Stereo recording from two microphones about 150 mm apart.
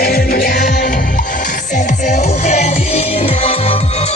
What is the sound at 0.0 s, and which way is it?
Music, 85° left.